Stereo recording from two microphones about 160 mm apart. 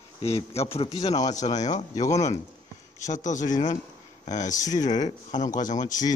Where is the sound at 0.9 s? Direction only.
25° left (ahead or behind).